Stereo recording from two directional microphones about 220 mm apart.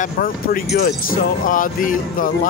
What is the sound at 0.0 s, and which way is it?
Speech, 40° left (ahead or behind).